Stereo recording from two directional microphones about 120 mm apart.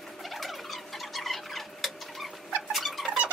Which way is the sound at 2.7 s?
Centre (ahead or behind).